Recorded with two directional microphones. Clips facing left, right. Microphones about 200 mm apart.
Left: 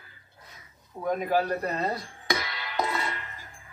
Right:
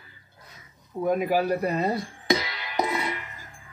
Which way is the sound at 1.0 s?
10° right (ahead or behind).